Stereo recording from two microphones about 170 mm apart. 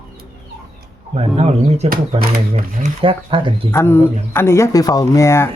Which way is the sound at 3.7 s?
15° left (ahead or behind).